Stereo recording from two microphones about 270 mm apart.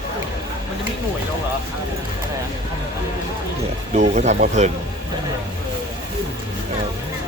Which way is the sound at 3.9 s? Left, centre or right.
Right.